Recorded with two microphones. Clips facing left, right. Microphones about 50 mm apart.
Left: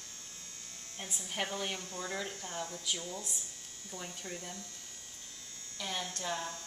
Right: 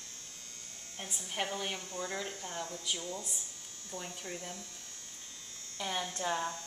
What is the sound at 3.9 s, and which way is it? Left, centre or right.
Speech, centre.